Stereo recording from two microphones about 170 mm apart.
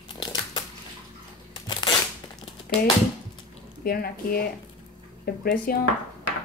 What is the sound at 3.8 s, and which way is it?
A woman's voice, 60° left (ahead or behind).